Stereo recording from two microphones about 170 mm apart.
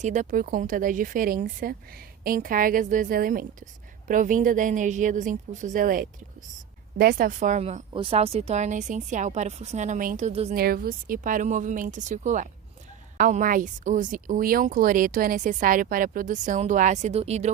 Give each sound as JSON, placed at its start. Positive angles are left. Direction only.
{"t": 0.0, "sound": "speech", "side_deg": -45}
{"t": 10.5, "sound": "speech", "side_deg": -60}